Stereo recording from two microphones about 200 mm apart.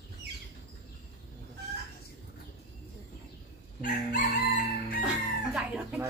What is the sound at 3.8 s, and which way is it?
Chicken, 40° left (ahead or behind).